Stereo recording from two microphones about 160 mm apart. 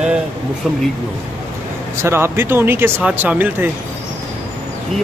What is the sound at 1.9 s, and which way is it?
Speech, 15° right (ahead or behind).